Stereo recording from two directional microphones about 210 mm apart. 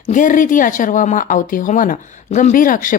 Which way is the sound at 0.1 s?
40° left (ahead or behind).